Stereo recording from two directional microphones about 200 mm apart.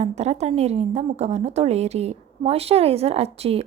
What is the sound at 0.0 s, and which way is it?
A woman's voice, 35° right (ahead or behind).